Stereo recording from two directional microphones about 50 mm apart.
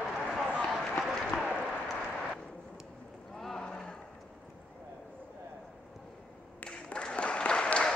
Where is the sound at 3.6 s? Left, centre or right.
Centre.